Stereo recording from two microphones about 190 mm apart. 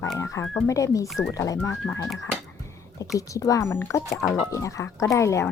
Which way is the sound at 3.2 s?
15° left (ahead or behind).